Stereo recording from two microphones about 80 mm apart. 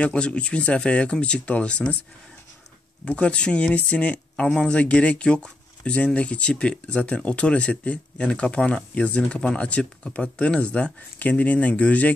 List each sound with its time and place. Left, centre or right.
0.0 s speech: centre
3.1 s speech: centre